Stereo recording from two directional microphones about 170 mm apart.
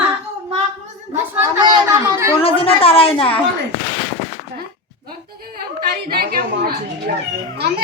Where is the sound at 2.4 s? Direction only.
35° left (ahead or behind).